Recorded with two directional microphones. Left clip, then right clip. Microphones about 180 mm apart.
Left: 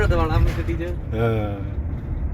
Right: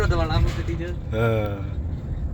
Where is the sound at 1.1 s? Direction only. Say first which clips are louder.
Right 1 dB; 5° right (ahead or behind).